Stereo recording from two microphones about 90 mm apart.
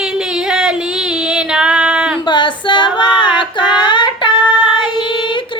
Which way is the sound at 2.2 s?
60° left (ahead or behind).